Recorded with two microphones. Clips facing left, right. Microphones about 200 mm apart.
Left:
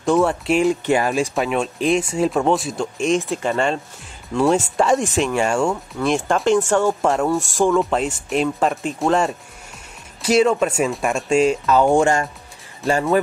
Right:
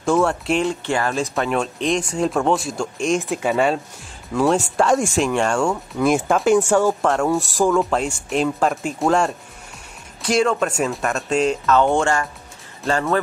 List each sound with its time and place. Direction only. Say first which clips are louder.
0.0 s speech: left 1 dB; centre (ahead or behind)
0.8 s speech: left 3 dB; 15° left (ahead or behind)
1.3 s speech: left 1 dB; centre (ahead or behind)